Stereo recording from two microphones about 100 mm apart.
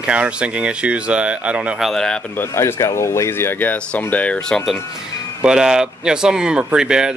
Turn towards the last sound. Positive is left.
turn(degrees=-5)  # may be behind; listen again after turning